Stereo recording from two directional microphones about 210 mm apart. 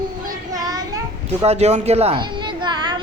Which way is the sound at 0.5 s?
15° right (ahead or behind).